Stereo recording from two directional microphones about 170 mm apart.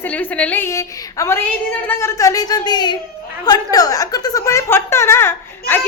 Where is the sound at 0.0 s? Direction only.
10° left (ahead or behind).